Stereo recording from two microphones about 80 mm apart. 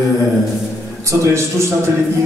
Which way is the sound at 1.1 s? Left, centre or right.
Right.